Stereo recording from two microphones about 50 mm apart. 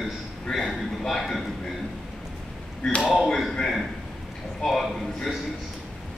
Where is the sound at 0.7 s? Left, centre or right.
Centre.